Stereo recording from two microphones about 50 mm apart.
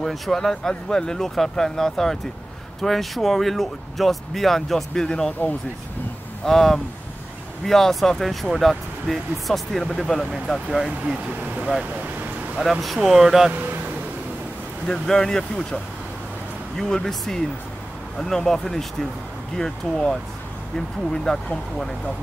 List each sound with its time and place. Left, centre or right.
0.0 s speech: centre
6.4 s speech: centre
11.2 s a sound: right
12.5 s speech: centre
13.5 s speech: right
14.9 s speech: centre